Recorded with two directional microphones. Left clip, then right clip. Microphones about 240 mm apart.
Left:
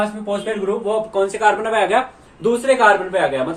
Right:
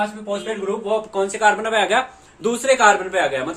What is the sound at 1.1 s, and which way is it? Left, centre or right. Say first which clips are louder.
Speech: left 1 dB; centre.